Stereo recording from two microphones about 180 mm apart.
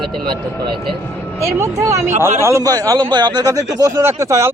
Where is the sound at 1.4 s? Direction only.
15° right (ahead or behind).